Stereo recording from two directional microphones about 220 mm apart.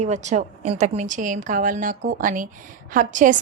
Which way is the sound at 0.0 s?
30° right (ahead or behind).